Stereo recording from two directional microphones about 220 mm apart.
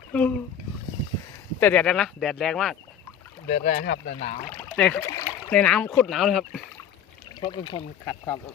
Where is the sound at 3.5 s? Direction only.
40° left (ahead or behind).